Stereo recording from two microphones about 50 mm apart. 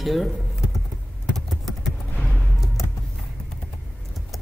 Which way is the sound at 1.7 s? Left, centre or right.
Centre.